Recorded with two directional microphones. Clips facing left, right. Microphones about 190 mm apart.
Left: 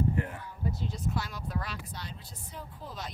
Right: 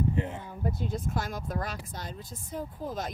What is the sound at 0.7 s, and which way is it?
A woman's voice, 50° right (ahead or behind).